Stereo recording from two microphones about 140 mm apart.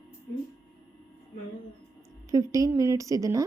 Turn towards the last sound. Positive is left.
turn(degrees=-25)  # may be behind; listen again after turning